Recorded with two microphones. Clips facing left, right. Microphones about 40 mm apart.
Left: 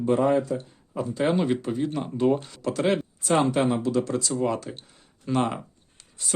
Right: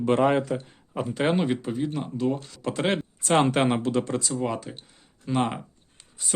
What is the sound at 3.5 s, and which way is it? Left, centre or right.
Speech, right.